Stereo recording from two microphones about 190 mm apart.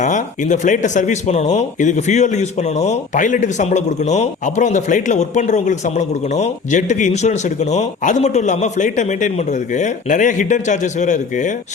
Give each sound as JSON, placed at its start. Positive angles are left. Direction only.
{"t": 0.0, "sound": "speech", "side_deg": 40}